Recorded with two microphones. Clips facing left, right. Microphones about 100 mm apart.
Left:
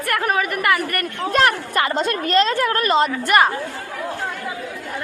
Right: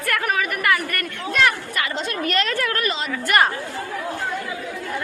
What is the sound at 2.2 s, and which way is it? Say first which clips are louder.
Speech: left 5 dB; 30° left (ahead or behind).